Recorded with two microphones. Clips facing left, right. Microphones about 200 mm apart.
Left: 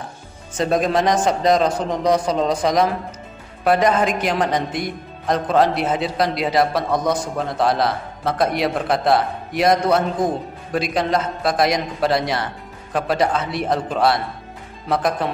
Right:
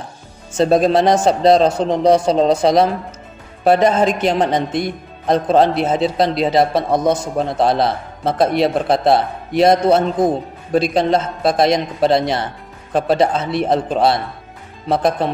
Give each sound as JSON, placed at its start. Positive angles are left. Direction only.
{"t": 0.6, "sound": "a man's voice", "side_deg": -30}